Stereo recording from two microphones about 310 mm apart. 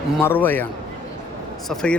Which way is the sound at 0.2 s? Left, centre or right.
Centre.